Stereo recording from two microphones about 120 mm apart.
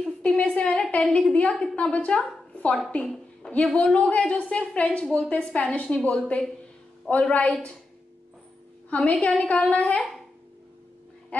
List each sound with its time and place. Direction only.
0.0 s a sound: 5° left (ahead or behind)
1.1 s a woman's voice: 10° left (ahead or behind)
8.9 s a woman's voice: 10° left (ahead or behind)